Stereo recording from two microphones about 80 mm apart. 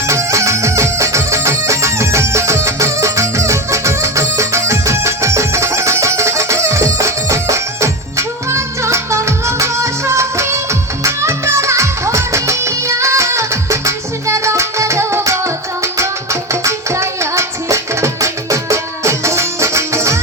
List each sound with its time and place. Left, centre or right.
0.1 s music: right